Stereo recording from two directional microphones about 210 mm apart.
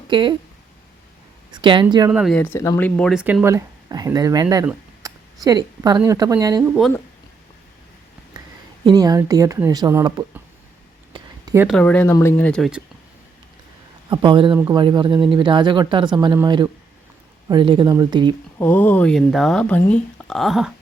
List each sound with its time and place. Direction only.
0.1 s speech: 20° right (ahead or behind)
1.5 s speech: 20° right (ahead or behind)
2.0 s speech: 5° right (ahead or behind)
2.3 s speech: 10° left (ahead or behind); by 6.7 s 15° right (ahead or behind)
8.8 s speech: 20° right (ahead or behind)
11.1 s a sound: 20° right (ahead or behind)
11.8 s speech: 5° left (ahead or behind)
14.1 s speech: 20° right (ahead or behind)
18.6 s speech: 10° left (ahead or behind)